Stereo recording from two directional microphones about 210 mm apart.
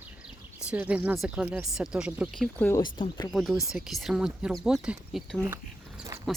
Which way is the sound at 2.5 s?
10° left (ahead or behind).